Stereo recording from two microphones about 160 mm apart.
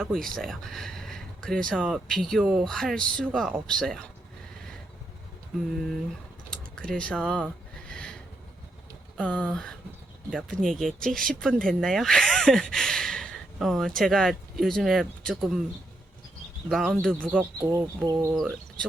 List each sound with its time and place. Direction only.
0.0 s speech: 5° left (ahead or behind)
2.6 s speech: 5° left (ahead or behind)
6.5 s speech: 5° left (ahead or behind)
7.9 s a sound: 5° left (ahead or behind)
9.1 s speech: 10° left (ahead or behind)
16.6 s speech: centre (ahead or behind)
17.3 s speech: 20° right (ahead or behind)